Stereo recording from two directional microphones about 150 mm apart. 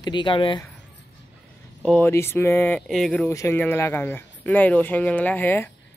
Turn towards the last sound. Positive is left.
turn(degrees=15)  # may be behind; listen again after turning